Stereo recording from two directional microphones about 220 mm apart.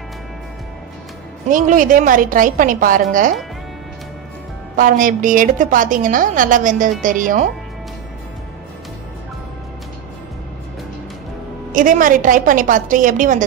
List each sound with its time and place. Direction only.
1.5 s a woman's voice: 35° right (ahead or behind)
4.7 s a woman's voice: 40° right (ahead or behind)
11.7 s a woman's voice: 35° right (ahead or behind)